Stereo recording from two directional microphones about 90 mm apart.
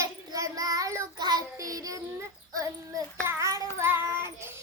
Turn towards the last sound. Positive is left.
turn(degrees=-30)  # may be behind; listen again after turning